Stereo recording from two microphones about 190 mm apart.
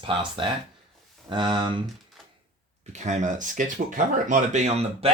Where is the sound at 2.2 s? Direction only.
Centre (ahead or behind).